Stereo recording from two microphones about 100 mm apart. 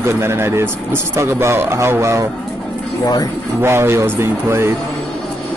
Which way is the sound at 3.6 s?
25° right (ahead or behind).